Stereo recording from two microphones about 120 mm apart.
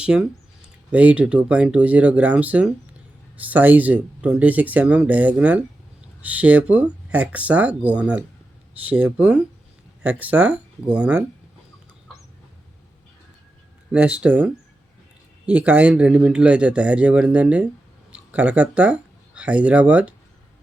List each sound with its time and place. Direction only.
0.0 s speech: 5° right (ahead or behind)
13.9 s speech: 10° right (ahead or behind)